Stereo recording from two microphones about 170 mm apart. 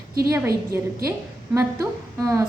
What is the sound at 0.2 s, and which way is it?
A woman's voice, 15° right (ahead or behind).